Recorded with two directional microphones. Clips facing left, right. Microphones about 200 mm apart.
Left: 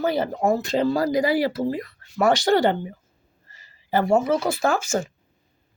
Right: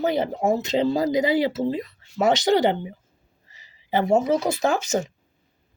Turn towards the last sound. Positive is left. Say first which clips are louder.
# even
turn(degrees=-20)  # may be behind; listen again after turning